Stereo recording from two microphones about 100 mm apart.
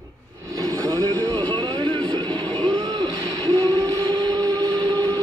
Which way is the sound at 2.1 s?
45° right (ahead or behind).